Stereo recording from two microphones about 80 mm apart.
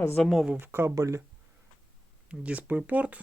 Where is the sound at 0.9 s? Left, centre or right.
Right.